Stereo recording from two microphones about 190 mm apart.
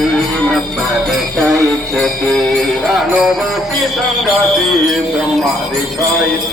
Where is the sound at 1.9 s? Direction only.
Centre (ahead or behind).